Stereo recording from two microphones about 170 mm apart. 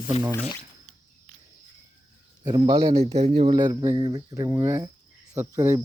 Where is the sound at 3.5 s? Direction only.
25° right (ahead or behind).